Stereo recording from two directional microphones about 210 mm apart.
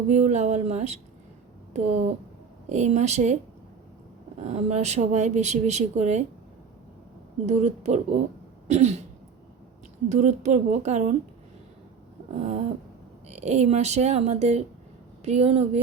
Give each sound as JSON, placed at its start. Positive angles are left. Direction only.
{"t": 0.1, "sound": "speech", "side_deg": -35}
{"t": 2.6, "sound": "speech", "side_deg": -35}
{"t": 4.4, "sound": "speech", "side_deg": -30}
{"t": 7.4, "sound": "speech", "side_deg": -30}
{"t": 8.6, "sound": "throat clearing", "side_deg": -30}
{"t": 10.1, "sound": "speech", "side_deg": -35}
{"t": 12.3, "sound": "speech", "side_deg": -30}